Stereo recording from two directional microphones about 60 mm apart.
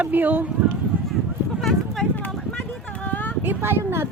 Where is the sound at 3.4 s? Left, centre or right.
Right.